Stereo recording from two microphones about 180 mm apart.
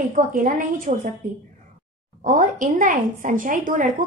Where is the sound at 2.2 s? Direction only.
50° right (ahead or behind).